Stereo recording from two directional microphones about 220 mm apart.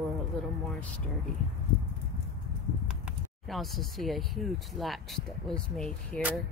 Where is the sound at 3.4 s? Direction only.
Centre (ahead or behind).